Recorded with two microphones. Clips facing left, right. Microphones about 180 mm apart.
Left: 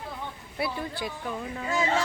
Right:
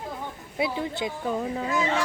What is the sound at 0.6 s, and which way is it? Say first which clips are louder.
Speech: right 4 dB; 20° right (ahead or behind).